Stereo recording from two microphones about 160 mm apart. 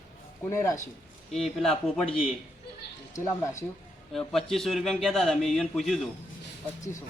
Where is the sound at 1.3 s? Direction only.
Centre (ahead or behind).